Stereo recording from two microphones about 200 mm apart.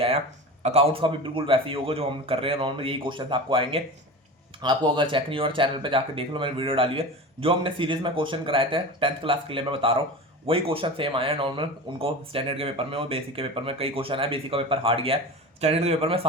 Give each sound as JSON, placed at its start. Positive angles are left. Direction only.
{"t": 0.6, "sound": "speech", "side_deg": -30}